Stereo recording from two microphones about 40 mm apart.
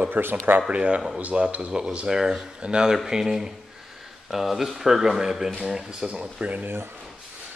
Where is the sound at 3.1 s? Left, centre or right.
Centre.